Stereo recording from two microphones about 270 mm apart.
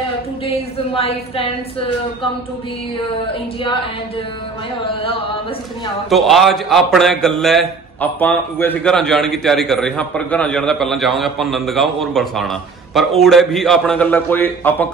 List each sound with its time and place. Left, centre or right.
0.9 s a woman's voice: left
6.0 s a man's voice: centre